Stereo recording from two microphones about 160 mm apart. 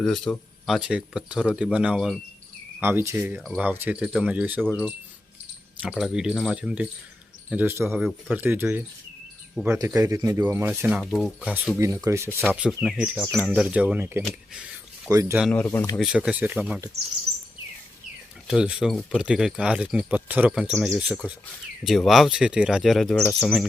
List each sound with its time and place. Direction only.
0.0 s speech: 5° left (ahead or behind)
2.8 s speech: 15° right (ahead or behind)
11.0 s speech: centre (ahead or behind)
11.8 s speech: 20° right (ahead or behind)
15.5 s speech: 10° left (ahead or behind)
16.0 s speech: 5° right (ahead or behind)
18.4 s speech: 5° right (ahead or behind)